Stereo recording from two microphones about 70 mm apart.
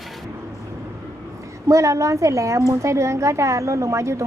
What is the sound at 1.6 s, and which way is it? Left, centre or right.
A woman's voice, right.